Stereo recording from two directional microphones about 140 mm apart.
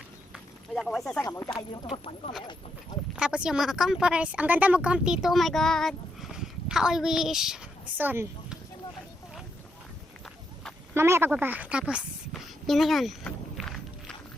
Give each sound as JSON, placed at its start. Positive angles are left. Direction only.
{"t": 0.3, "sound": "a sound", "side_deg": 0}
{"t": 1.2, "sound": "speech", "side_deg": 20}
{"t": 1.9, "sound": "speech", "side_deg": 45}
{"t": 3.2, "sound": "a woman's voice", "side_deg": -5}
{"t": 10.2, "sound": "run", "side_deg": 5}
{"t": 10.9, "sound": "a woman's voice", "side_deg": -20}
{"t": 12.3, "sound": "a sound", "side_deg": 0}
{"t": 13.6, "sound": "music", "side_deg": 5}